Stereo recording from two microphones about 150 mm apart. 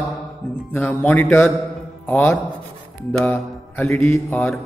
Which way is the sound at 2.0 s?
10° left (ahead or behind).